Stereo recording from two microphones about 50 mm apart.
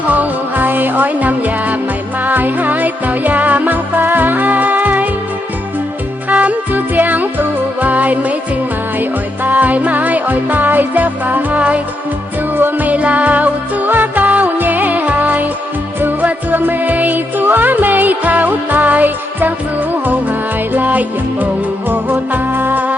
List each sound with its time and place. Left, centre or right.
0.0 s music: right
6.2 s music: right
20.7 s music: right